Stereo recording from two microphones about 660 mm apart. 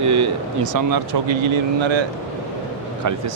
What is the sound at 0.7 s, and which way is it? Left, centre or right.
Speech, right.